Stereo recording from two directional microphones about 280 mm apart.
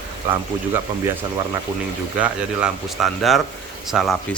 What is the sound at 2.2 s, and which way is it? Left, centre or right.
Speech, centre.